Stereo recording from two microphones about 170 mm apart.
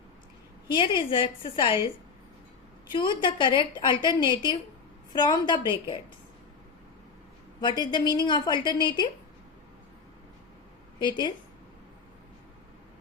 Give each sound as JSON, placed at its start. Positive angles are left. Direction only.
{"t": 0.7, "sound": "a woman's voice", "side_deg": 30}
{"t": 3.2, "sound": "a woman's voice", "side_deg": 30}
{"t": 7.6, "sound": "a woman's voice", "side_deg": 25}
{"t": 11.0, "sound": "a woman's voice", "side_deg": 25}